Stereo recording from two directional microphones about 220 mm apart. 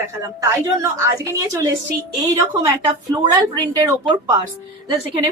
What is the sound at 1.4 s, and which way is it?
Speech, 15° right (ahead or behind).